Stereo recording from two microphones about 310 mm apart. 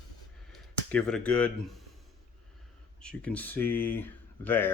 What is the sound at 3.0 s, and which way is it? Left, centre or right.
Speech, centre.